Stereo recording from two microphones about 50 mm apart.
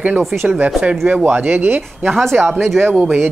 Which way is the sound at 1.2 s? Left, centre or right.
Right.